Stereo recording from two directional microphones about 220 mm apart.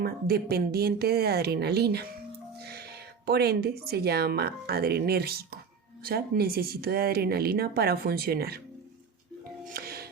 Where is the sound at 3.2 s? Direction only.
45° right (ahead or behind).